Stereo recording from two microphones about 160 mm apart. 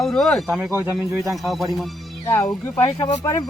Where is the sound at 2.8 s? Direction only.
25° left (ahead or behind).